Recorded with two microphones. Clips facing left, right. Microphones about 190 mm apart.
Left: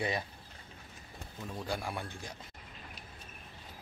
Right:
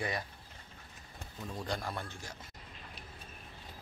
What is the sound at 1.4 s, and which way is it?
Speech, 5° left (ahead or behind).